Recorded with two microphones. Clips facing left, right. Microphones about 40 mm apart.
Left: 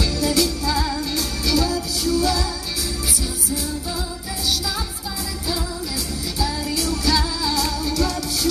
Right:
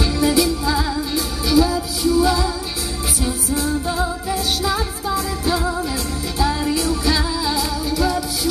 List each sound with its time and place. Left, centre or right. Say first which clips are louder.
0.0 s music: right 3 dB; right
6.4 s music: right 5 dB; right; by 8.2 s centre